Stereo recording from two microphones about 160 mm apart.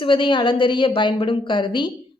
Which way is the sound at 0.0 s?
30° left (ahead or behind).